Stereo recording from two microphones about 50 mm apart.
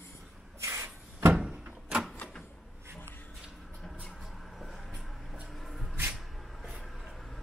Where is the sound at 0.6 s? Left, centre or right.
Right.